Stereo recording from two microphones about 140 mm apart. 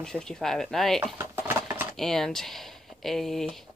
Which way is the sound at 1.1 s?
15° right (ahead or behind).